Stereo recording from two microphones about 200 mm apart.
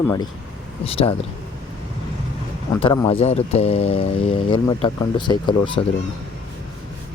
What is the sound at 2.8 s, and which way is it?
Speech, 25° left (ahead or behind).